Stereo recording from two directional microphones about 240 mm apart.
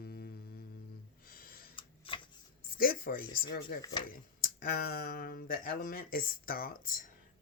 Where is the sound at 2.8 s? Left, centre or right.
Left.